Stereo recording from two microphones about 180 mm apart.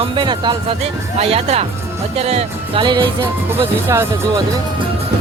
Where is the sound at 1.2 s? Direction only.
35° right (ahead or behind).